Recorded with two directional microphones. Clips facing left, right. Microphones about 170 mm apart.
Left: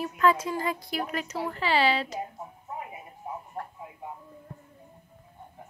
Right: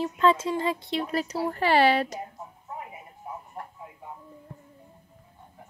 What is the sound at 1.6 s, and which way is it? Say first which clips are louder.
Speech: right 4 dB; 50° right (ahead or behind).